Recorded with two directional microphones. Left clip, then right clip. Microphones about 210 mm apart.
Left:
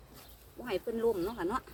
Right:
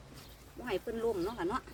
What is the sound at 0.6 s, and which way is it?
Speech, 15° left (ahead or behind).